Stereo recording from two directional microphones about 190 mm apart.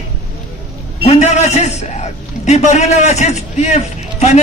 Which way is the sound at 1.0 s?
35° left (ahead or behind).